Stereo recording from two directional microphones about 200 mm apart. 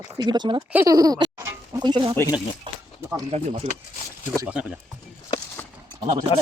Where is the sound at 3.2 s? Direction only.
30° right (ahead or behind).